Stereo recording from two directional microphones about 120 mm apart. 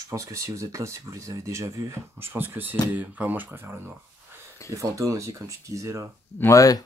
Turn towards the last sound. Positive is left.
turn(degrees=30)  # may be behind; listen again after turning